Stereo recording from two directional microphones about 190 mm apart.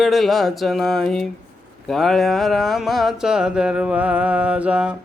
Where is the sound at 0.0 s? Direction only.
Centre (ahead or behind).